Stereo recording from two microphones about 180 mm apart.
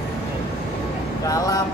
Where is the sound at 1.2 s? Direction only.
20° left (ahead or behind).